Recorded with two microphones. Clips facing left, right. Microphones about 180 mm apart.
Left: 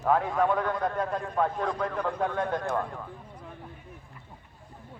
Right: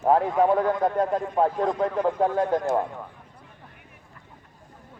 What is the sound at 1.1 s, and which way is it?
A man's voice, 20° right (ahead or behind).